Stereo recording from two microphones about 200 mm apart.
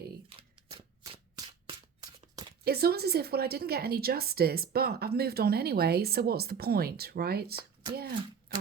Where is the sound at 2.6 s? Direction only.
50° right (ahead or behind).